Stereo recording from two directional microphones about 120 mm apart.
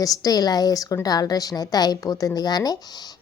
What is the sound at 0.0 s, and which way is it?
A woman's voice, 30° left (ahead or behind).